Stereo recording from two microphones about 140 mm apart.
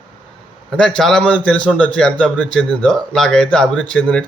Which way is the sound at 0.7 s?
5° left (ahead or behind).